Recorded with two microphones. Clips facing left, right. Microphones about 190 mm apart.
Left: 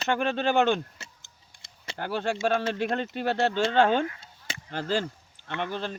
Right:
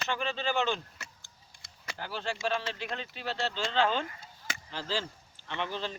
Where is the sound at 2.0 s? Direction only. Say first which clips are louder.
Left 7 dB; 55° left (ahead or behind).